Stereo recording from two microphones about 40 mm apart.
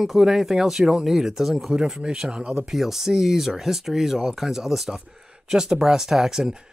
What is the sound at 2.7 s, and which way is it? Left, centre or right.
Speech, centre.